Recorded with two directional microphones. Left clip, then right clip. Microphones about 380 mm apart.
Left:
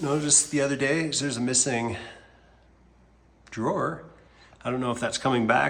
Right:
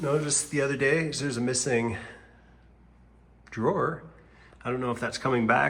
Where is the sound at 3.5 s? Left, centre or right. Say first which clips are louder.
Right 1 dB; centre.